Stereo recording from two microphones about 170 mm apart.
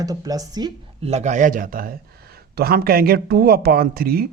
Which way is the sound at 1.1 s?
40° right (ahead or behind).